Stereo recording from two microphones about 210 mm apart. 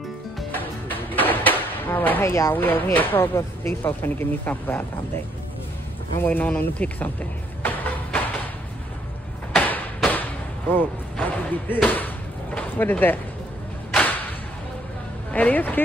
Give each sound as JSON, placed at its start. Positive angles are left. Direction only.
{"t": 0.4, "sound": "music", "side_deg": 10}
{"t": 6.1, "sound": "speech", "side_deg": 10}
{"t": 9.6, "sound": "a sound", "side_deg": 10}
{"t": 10.7, "sound": "speech", "side_deg": 10}
{"t": 15.3, "sound": "speech", "side_deg": 5}